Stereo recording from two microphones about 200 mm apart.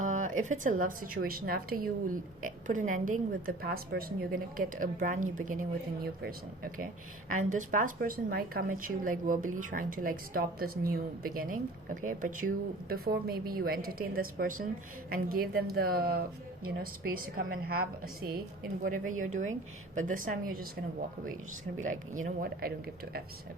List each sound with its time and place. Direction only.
0.0 s a sound: 40° right (ahead or behind)
0.4 s a woman's voice: 40° right (ahead or behind)
21.8 s speech: 40° right (ahead or behind)